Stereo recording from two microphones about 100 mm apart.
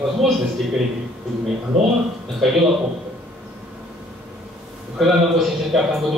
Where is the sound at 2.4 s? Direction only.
Centre (ahead or behind).